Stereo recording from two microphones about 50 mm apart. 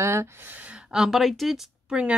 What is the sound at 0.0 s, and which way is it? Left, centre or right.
Speech, right.